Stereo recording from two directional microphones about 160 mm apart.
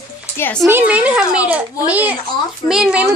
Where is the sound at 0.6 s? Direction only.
10° right (ahead or behind).